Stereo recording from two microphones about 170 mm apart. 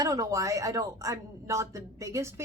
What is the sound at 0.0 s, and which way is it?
A woman's voice, 20° right (ahead or behind).